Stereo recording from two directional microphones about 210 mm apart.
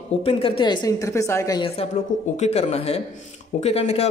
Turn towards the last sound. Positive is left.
turn(degrees=30)  # may be behind; listen again after turning